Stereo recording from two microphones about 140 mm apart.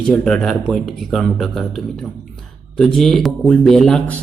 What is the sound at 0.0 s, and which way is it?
Speech, 5° left (ahead or behind).